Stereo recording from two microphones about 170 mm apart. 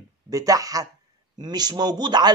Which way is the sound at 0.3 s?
20° right (ahead or behind).